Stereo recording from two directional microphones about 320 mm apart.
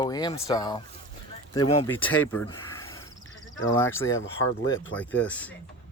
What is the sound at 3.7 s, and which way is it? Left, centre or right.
Speech, left.